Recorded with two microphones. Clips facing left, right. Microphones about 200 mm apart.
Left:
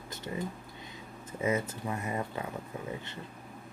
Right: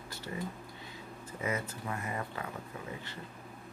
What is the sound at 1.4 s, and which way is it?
Speech, 25° left (ahead or behind).